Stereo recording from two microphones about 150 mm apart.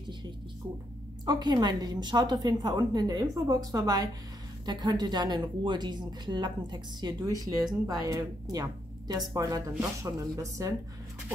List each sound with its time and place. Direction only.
1.2 s speech: 25° right (ahead or behind)